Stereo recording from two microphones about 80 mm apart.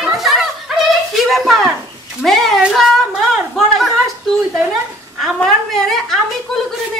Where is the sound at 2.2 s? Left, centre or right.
Centre.